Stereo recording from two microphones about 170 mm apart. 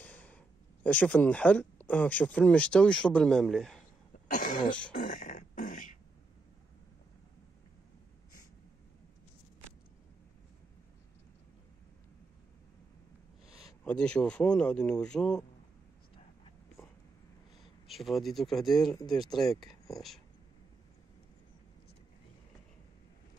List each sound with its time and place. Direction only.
0.0 s a sound: 10° left (ahead or behind)
0.8 s speech: 10° left (ahead or behind)
4.3 s cough: 55° left (ahead or behind)
4.9 s beatboxing: 50° left (ahead or behind)
13.8 s speech: 5° left (ahead or behind)
17.8 s speech: centre (ahead or behind)
18.9 s speech: 25° left (ahead or behind)
19.3 s speech: centre (ahead or behind)